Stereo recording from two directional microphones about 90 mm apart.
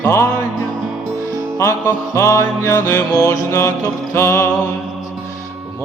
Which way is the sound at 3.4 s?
30° left (ahead or behind).